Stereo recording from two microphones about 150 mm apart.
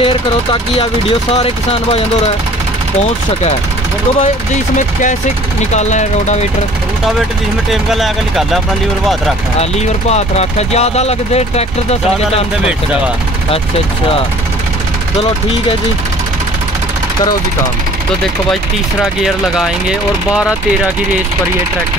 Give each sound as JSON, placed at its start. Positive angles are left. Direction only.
{"t": 0.0, "sound": "speech", "side_deg": 35}
{"t": 5.6, "sound": "speech", "side_deg": 50}
{"t": 7.7, "sound": "speech", "side_deg": 0}
{"t": 9.6, "sound": "speech", "side_deg": 45}
{"t": 19.2, "sound": "speech", "side_deg": -5}